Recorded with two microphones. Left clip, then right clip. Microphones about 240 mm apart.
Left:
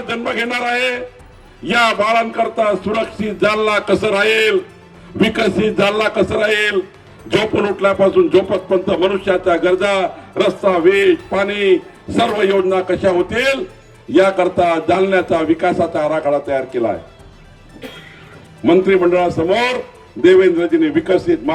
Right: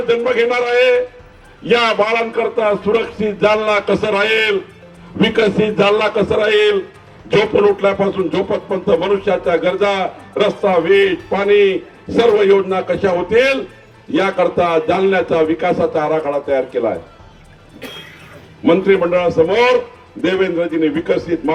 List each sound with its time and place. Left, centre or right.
0.1 s speech: left
18.6 s speech: left